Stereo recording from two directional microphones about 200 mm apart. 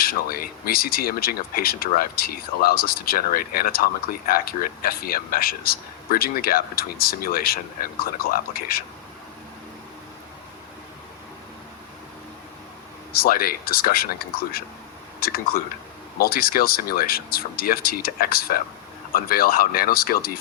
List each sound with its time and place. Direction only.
0.0 s a man's voice: 50° left (ahead or behind)
13.1 s a man's voice: 45° left (ahead or behind)